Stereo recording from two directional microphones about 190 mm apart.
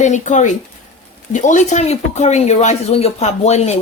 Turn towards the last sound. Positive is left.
turn(degrees=35)  # may be behind; listen again after turning